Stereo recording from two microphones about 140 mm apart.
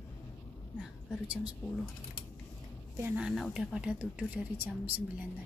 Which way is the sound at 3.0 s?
15° right (ahead or behind).